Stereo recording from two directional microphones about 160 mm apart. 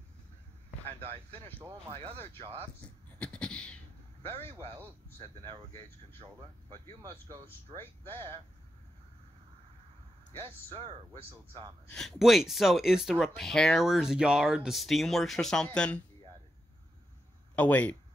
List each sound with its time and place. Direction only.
1.9 s speech: 35° right (ahead or behind)
2.8 s speech: 5° left (ahead or behind)
3.2 s beatboxing: 5° left (ahead or behind)
5.4 s speech: 35° right (ahead or behind)
7.0 s speech: 25° right (ahead or behind)
7.4 s speech: 15° left (ahead or behind)
10.4 s speech: 35° right (ahead or behind)
11.9 s speech: 5° left (ahead or behind)
17.6 s speech: 10° left (ahead or behind)